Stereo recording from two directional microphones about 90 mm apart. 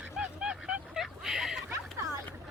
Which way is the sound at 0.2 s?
10° right (ahead or behind).